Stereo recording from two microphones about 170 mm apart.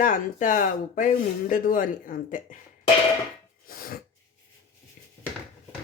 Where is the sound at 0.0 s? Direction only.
50° left (ahead or behind).